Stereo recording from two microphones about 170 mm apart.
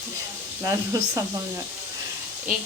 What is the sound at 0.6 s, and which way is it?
Speech, 20° right (ahead or behind).